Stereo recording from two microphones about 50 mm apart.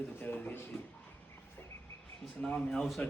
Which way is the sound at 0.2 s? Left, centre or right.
Left.